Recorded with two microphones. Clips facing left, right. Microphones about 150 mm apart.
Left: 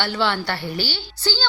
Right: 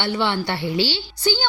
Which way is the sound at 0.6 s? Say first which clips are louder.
Right 5 dB; 70° right (ahead or behind).